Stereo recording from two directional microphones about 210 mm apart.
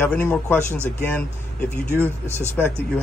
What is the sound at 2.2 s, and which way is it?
Speech, 10° right (ahead or behind).